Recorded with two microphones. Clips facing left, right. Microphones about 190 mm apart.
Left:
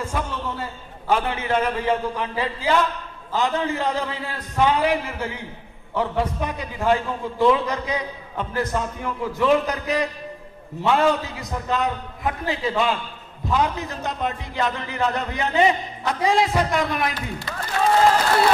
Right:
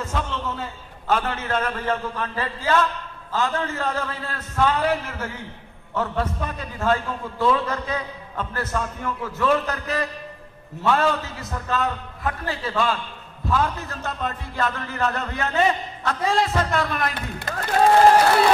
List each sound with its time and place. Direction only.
0.0 s a man's voice: 10° left (ahead or behind)
17.1 s speech: 55° right (ahead or behind)